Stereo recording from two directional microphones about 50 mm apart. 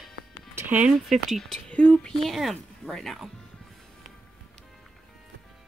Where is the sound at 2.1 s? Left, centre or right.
Centre.